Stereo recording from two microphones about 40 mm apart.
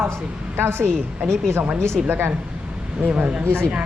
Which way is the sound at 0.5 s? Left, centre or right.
Right.